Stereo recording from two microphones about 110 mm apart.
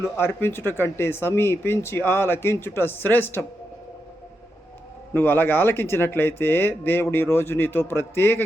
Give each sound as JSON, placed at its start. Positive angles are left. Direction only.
{"t": 0.0, "sound": "speech", "side_deg": 20}
{"t": 5.1, "sound": "speech", "side_deg": 20}